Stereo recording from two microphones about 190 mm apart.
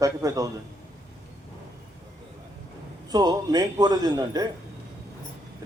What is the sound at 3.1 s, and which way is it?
A man's voice, 20° right (ahead or behind).